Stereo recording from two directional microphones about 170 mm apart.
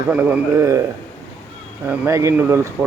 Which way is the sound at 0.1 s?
10° right (ahead or behind).